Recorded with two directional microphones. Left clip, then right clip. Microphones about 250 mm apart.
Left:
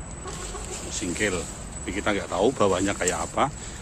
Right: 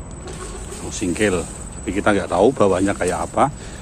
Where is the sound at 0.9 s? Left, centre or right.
Centre.